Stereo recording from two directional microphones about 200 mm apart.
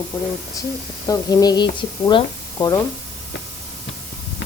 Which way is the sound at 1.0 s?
20° left (ahead or behind).